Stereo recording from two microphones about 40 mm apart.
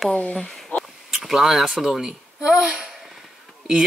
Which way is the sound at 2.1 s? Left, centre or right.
Centre.